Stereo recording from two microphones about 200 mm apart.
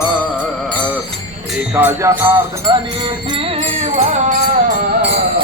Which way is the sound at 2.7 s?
20° right (ahead or behind).